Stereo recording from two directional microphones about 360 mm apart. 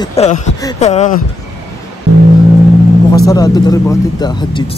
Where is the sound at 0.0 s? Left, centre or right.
Centre.